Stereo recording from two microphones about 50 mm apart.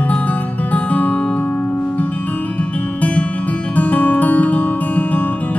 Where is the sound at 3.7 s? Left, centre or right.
Left.